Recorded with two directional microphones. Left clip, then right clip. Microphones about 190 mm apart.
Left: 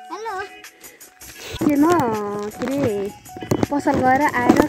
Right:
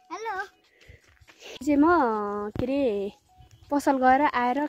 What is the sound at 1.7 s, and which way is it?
Speech, 15° right (ahead or behind).